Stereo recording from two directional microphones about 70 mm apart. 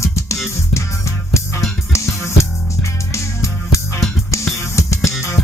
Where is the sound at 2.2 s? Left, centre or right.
Left.